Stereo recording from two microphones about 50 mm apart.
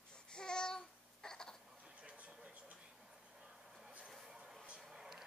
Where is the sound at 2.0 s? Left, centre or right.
Right.